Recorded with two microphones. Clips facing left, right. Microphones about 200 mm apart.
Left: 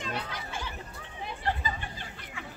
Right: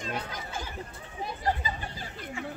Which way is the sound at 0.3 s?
45° right (ahead or behind).